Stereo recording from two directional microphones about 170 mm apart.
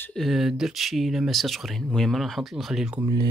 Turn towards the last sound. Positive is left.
turn(degrees=-20)  # may be behind; listen again after turning